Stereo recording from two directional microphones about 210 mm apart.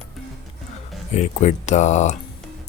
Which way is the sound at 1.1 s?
35° left (ahead or behind).